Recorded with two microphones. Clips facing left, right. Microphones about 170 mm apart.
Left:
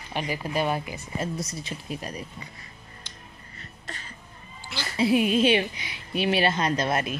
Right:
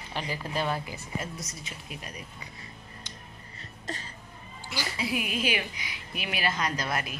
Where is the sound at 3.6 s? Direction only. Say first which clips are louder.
Right 4 dB; 35° right (ahead or behind).